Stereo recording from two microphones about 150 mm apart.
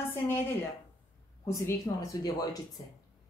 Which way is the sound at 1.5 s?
20° left (ahead or behind).